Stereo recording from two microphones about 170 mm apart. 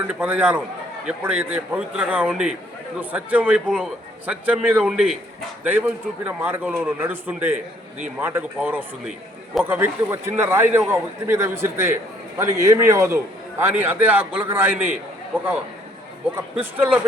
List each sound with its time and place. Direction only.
0.1 s a man's voice: 10° right (ahead or behind)
16.7 s a man's voice: 10° right (ahead or behind)